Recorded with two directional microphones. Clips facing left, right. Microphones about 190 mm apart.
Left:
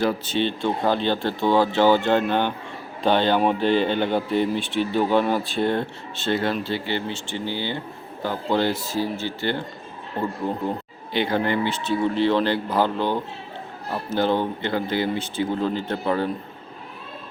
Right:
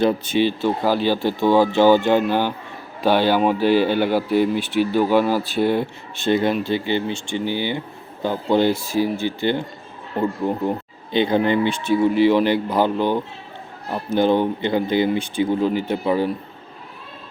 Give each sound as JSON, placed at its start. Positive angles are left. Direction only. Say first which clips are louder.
{"t": 0.0, "sound": "speech", "louder": "right 4 dB", "side_deg": -20}
{"t": 0.3, "sound": "speech", "louder": "right 4 dB", "side_deg": -5}